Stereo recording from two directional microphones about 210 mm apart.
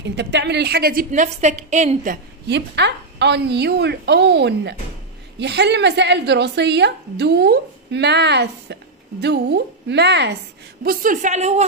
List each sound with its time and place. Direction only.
0.0 s a woman's voice: 55° right (ahead or behind); by 2.1 s 35° right (ahead or behind)
2.4 s a woman's voice: 55° right (ahead or behind)
10.8 s a woman's voice: 45° right (ahead or behind)